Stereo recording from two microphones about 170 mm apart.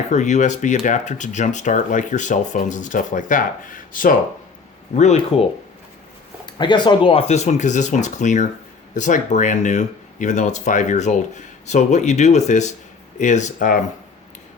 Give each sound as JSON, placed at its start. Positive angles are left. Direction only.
{"t": 0.1, "sound": "speech", "side_deg": 45}
{"t": 4.9, "sound": "speech", "side_deg": 40}
{"t": 6.4, "sound": "speech", "side_deg": 25}